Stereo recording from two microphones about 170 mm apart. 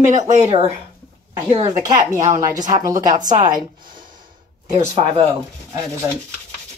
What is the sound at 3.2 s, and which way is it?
Speech, 50° right (ahead or behind).